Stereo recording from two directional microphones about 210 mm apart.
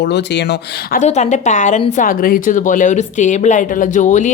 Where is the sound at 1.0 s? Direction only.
35° left (ahead or behind).